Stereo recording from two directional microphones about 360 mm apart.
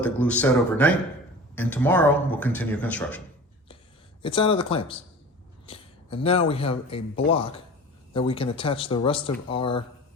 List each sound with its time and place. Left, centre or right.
0.0 s speech: centre
4.2 s speech: centre